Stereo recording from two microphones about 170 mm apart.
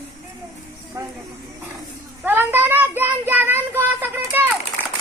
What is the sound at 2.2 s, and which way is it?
Child singing, 10° right (ahead or behind).